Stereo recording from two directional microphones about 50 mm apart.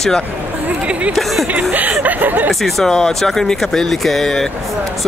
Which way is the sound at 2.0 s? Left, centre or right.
Right.